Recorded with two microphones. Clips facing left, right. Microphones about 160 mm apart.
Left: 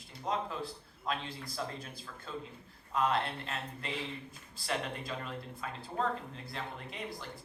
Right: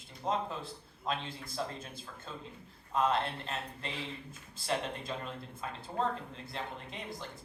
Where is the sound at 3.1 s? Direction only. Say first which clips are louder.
Even; 25° right (ahead or behind).